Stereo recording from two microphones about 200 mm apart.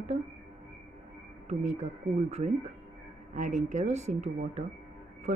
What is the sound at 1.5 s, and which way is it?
Speech, 35° right (ahead or behind).